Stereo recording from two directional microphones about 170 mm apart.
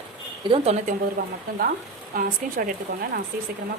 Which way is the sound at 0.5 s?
40° right (ahead or behind).